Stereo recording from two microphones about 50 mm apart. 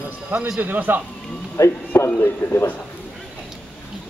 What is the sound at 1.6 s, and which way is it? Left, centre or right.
Speech, left.